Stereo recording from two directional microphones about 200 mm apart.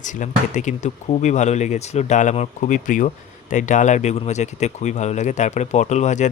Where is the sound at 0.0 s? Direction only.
40° left (ahead or behind).